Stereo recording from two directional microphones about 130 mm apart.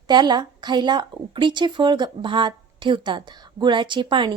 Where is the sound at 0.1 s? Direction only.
35° right (ahead or behind).